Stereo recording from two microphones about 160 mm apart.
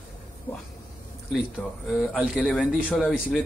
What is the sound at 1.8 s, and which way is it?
Speech, centre (ahead or behind).